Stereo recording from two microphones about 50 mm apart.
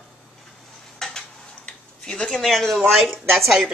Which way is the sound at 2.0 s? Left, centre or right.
Centre.